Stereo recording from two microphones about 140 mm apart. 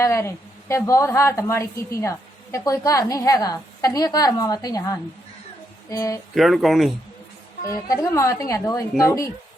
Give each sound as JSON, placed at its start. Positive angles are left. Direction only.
{"t": 0.0, "sound": "a woman's voice", "side_deg": 20}
{"t": 6.3, "sound": "speech", "side_deg": 0}
{"t": 7.7, "sound": "a woman's voice", "side_deg": 20}